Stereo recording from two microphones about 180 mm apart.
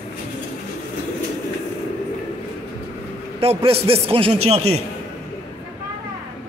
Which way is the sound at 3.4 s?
30° right (ahead or behind).